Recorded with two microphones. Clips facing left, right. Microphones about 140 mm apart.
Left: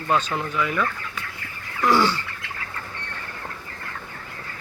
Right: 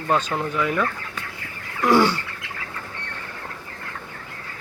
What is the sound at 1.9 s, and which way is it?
Bird, 55° right (ahead or behind).